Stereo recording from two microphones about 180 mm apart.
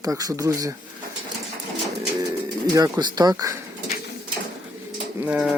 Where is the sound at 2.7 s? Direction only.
20° right (ahead or behind).